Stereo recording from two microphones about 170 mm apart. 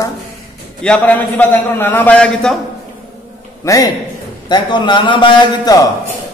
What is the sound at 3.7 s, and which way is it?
A man's voice, 20° left (ahead or behind).